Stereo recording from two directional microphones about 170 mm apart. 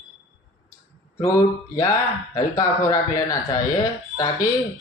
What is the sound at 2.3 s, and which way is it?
Speech, 20° left (ahead or behind).